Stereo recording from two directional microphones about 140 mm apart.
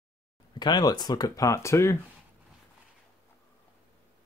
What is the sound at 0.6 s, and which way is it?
Speech, 30° left (ahead or behind).